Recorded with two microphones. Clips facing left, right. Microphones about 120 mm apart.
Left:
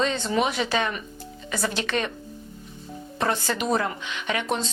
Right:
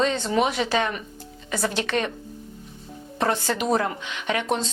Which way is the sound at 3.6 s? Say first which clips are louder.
Right 2 dB; 40° right (ahead or behind).